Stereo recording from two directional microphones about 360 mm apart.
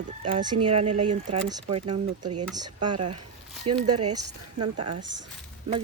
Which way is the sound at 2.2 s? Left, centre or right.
Right.